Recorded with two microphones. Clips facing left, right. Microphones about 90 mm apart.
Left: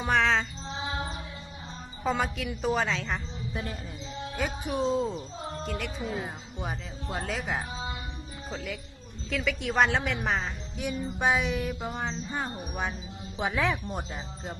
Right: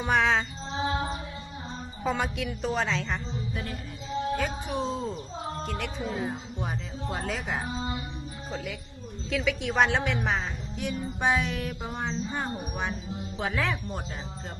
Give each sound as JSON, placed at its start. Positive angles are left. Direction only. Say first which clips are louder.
{"t": 0.0, "sound": "music", "louder": "right 1 dB", "side_deg": -5}
{"t": 2.0, "sound": "a woman's voice", "louder": "even", "side_deg": 0}
{"t": 3.5, "sound": "music", "louder": "left 4 dB", "side_deg": 25}
{"t": 4.4, "sound": "a woman's voice", "louder": "even", "side_deg": 5}
{"t": 13.4, "sound": "speech", "louder": "left 2 dB", "side_deg": 10}